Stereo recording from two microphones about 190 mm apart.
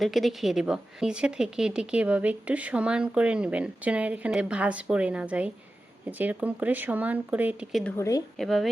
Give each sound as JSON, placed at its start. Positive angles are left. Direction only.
{"t": 0.0, "sound": "a woman's voice", "side_deg": 0}
{"t": 7.9, "sound": "a woman's voice", "side_deg": 15}
{"t": 8.4, "sound": "a woman's voice", "side_deg": 0}